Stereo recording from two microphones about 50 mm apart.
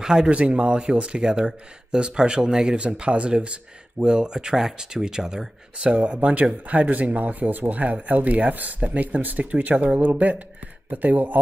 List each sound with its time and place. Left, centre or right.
0.0 s speech: centre
5.9 s speech: right